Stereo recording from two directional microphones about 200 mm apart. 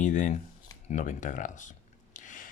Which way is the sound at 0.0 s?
40° left (ahead or behind).